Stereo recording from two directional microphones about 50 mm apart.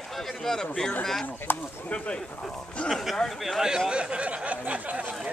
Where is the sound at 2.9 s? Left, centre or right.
Centre.